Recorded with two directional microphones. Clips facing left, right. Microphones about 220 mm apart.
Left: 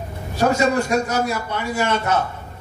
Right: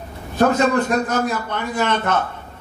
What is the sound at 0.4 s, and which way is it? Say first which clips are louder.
A man's voice: right 2 dB; 10° left (ahead or behind).